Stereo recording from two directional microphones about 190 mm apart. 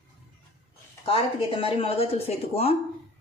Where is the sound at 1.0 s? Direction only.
30° left (ahead or behind).